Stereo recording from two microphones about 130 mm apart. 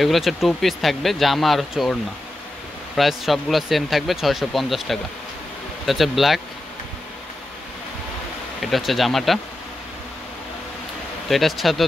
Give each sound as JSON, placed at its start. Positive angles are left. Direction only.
{"t": 0.0, "sound": "speech", "side_deg": 0}
{"t": 3.0, "sound": "speech", "side_deg": 0}
{"t": 8.5, "sound": "speech", "side_deg": 0}
{"t": 11.2, "sound": "speech", "side_deg": 0}